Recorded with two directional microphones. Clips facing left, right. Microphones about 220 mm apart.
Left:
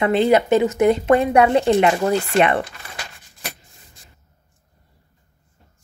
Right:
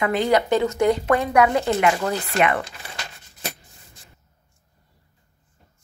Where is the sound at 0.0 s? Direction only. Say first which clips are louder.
Left 4 dB; 25° left (ahead or behind).